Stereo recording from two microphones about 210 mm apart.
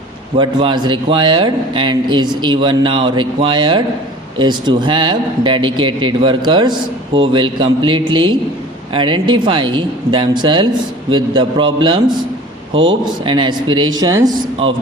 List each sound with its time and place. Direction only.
0.3 s speech: 25° right (ahead or behind)
13.2 s speech: 25° right (ahead or behind)